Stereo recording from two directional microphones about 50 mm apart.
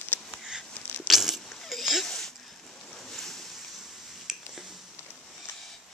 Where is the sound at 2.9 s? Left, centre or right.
Centre.